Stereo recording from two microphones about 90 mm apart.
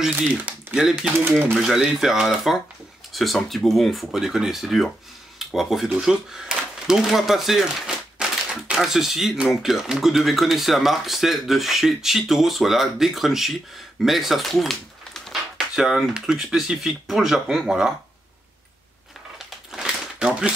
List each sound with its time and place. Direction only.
0.1 s speech: 25° right (ahead or behind)
0.7 s speech: 5° right (ahead or behind)
19.3 s crumpling: 5° right (ahead or behind)